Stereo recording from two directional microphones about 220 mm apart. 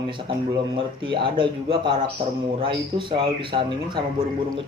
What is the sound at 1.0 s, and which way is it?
Speech, 20° right (ahead or behind).